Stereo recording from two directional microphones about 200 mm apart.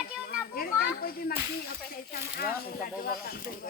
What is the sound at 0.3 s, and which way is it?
Children playing, 50° left (ahead or behind).